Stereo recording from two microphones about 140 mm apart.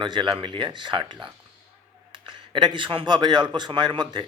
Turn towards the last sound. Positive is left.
turn(degrees=-35)  # may be behind; listen again after turning